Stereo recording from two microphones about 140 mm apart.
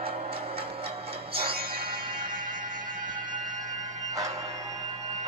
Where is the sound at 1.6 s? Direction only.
90° right.